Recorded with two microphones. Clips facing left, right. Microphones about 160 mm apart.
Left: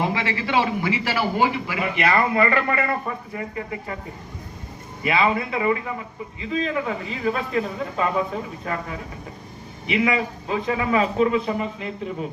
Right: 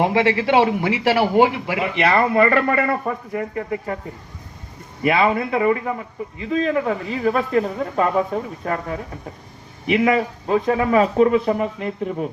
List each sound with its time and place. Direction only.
0.0 s a man's voice: 65° right (ahead or behind)
2.0 s speech: 30° right (ahead or behind)
3.3 s speech: 50° right (ahead or behind)
5.0 s speech: 50° right (ahead or behind)